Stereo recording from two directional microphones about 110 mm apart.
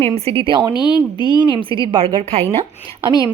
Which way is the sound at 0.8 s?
40° left (ahead or behind).